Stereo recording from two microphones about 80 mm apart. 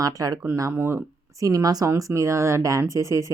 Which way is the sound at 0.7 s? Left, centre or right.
Right.